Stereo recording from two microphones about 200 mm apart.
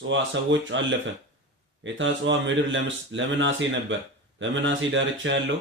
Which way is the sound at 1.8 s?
70° right (ahead or behind).